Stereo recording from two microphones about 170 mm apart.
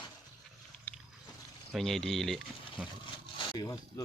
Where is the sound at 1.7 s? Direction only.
Centre (ahead or behind).